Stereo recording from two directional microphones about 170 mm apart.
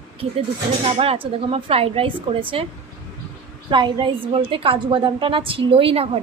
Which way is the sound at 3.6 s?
25° right (ahead or behind).